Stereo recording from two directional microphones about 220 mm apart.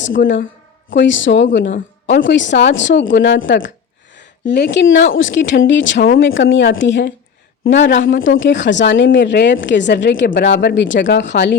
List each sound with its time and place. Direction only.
0.2 s a woman's voice: 40° left (ahead or behind)
0.9 s speech: 55° left (ahead or behind)
10.2 s speech: 45° left (ahead or behind)